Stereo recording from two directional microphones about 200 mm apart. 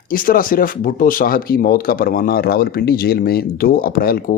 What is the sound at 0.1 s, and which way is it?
Speech, 45° left (ahead or behind).